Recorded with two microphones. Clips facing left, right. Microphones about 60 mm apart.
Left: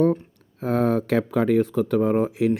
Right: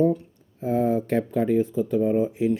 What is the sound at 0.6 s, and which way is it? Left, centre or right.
Speech, left.